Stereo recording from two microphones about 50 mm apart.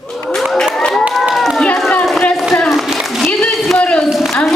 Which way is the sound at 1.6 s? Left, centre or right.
Centre.